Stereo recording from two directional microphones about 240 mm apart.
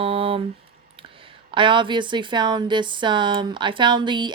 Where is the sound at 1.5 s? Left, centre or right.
Right.